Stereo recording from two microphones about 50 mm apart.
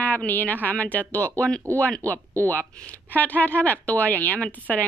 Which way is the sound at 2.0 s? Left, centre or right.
Right.